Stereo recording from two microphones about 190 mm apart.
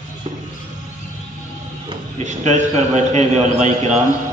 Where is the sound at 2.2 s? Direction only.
35° right (ahead or behind).